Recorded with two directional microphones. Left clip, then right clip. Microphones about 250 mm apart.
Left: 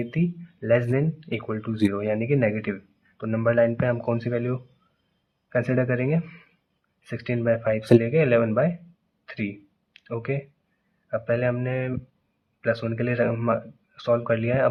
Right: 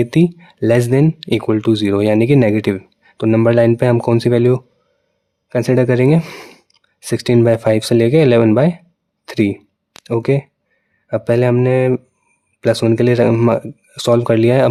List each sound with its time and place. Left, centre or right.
0.0 s speech: right
9.2 s a sound: right
11.1 s speech: right